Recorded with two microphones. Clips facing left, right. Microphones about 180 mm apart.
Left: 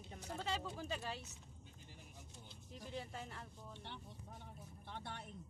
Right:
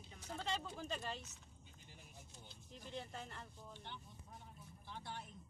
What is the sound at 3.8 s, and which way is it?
Vehicle, 75° left (ahead or behind).